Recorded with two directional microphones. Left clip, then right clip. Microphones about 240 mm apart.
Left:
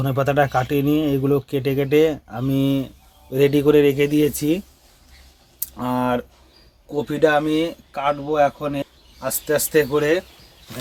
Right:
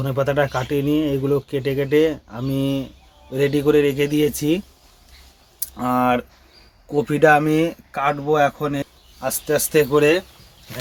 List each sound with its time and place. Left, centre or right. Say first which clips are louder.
0.0 s speech: left 1 dB; centre
6.9 s speech: right 3 dB; centre
9.2 s speech: even; centre